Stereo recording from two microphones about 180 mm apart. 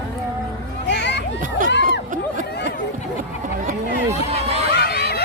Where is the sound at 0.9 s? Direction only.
75° left (ahead or behind).